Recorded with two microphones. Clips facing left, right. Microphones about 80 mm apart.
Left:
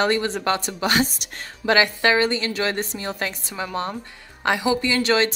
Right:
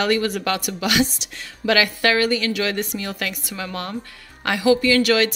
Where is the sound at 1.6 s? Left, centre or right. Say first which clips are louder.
Even; left.